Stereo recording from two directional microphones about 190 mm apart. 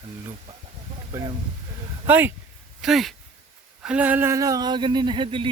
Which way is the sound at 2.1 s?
10° right (ahead or behind).